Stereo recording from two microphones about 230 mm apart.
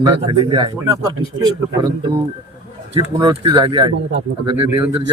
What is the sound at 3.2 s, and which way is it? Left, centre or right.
Speech, centre.